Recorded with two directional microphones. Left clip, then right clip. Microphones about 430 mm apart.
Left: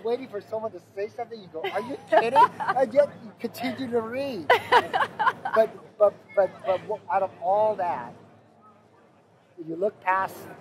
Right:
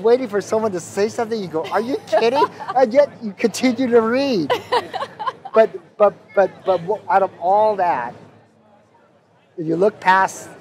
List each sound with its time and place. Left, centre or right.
0.0 s a man's voice: right
2.4 s speech: left
2.8 s a man's voice: right
4.5 s a sound: left
5.6 s a man's voice: right
9.7 s a man's voice: right